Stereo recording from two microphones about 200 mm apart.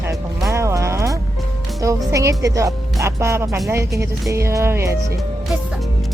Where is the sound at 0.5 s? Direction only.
15° right (ahead or behind).